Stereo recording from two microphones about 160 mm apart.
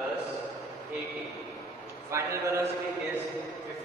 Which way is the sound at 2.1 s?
20° right (ahead or behind).